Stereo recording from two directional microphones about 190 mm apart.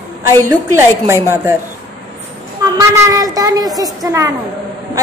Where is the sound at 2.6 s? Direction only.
20° right (ahead or behind).